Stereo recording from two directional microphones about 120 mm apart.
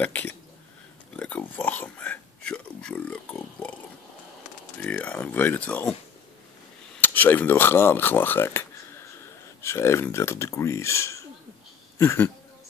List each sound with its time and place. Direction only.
0.0 s speech: 15° left (ahead or behind)
4.8 s speech: 10° left (ahead or behind)
7.0 s speech: 15° left (ahead or behind)